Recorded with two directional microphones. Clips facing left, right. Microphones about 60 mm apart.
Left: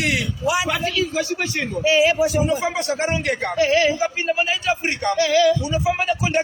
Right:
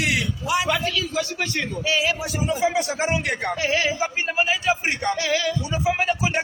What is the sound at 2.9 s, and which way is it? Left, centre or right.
A man's voice, centre.